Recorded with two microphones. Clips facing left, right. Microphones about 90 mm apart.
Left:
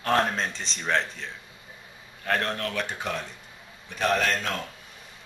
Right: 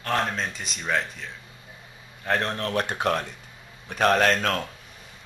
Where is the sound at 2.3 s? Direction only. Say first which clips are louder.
Right 1 dB; 25° right (ahead or behind).